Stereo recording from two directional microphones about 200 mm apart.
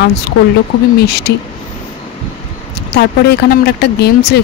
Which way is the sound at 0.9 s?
55° left (ahead or behind).